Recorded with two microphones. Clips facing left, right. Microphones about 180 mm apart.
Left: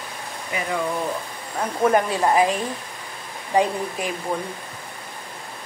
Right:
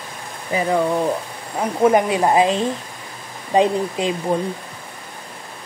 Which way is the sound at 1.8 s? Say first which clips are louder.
Right 4 dB; 20° right (ahead or behind).